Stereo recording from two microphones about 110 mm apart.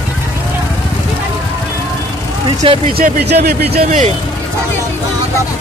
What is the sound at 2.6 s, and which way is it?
Speech, 55° right (ahead or behind).